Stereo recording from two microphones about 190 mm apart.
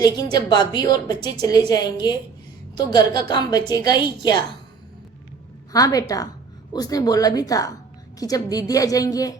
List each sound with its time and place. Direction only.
0.0 s a woman's voice: 20° left (ahead or behind)
5.7 s a woman's voice: 20° left (ahead or behind)